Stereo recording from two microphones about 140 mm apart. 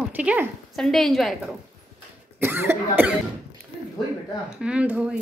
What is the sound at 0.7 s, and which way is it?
Speech, 5° left (ahead or behind).